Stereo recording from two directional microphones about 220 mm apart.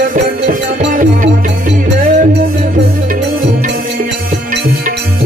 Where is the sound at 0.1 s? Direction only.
40° right (ahead or behind).